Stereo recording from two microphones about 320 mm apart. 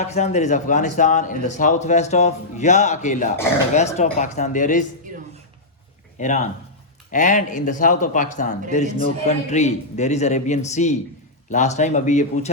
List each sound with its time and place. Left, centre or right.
0.0 s speech: left
6.1 s speech: left